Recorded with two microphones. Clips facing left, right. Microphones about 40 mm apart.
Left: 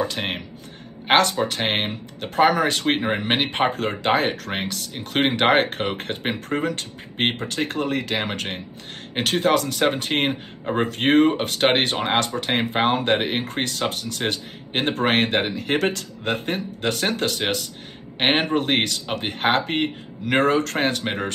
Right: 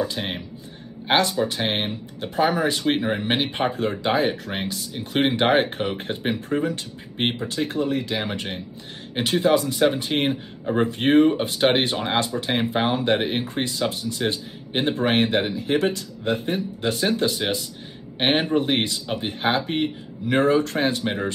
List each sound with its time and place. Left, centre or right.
0.0 s speech: left
10.6 s speech: left
10.9 s speech: left